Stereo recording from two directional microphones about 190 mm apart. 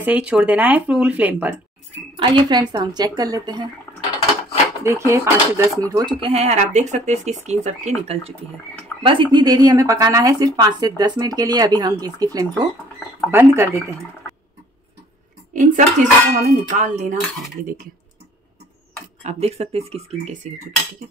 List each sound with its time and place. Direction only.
0.0 s speech: 5° right (ahead or behind)
2.1 s speech: 25° right (ahead or behind)
4.8 s speech: 15° right (ahead or behind); by 7.9 s 35° right (ahead or behind)
9.0 s speech: 25° right (ahead or behind)
15.5 s speech: 40° right (ahead or behind)
19.2 s speech: 35° right (ahead or behind)